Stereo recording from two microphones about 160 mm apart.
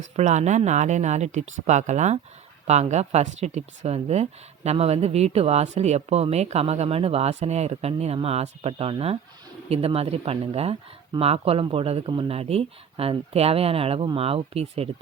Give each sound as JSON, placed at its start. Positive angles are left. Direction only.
{"t": 0.2, "sound": "speech", "side_deg": -45}